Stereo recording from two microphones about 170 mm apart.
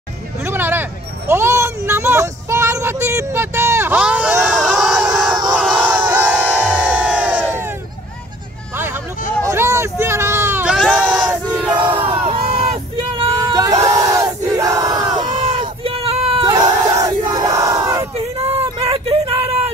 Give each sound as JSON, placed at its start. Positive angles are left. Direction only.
{"t": 0.5, "sound": "a sound", "side_deg": -10}
{"t": 1.9, "sound": "child singing", "side_deg": -15}
{"t": 5.3, "sound": "battle cry", "side_deg": -25}
{"t": 5.6, "sound": "crowd", "side_deg": -5}
{"t": 9.4, "sound": "hubbub", "side_deg": -15}
{"t": 10.8, "sound": "sheep", "side_deg": -5}
{"t": 11.7, "sound": "a sound", "side_deg": -30}
{"t": 15.3, "sound": "crowd", "side_deg": -30}
{"t": 18.1, "sound": "a sound", "side_deg": -35}